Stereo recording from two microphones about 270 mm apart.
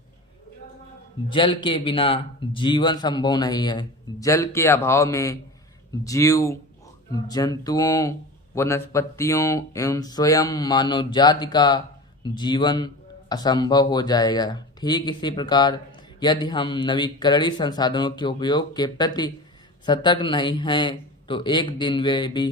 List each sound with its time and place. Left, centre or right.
1.3 s speech: centre